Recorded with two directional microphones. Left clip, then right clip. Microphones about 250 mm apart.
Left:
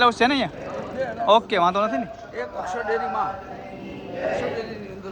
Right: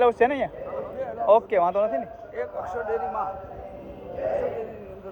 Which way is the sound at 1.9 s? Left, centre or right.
Left.